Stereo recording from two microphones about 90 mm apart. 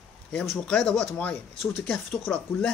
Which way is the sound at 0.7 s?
10° left (ahead or behind).